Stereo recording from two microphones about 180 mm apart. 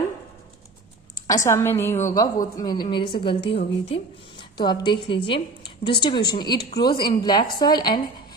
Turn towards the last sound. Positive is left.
turn(degrees=25)  # may be behind; listen again after turning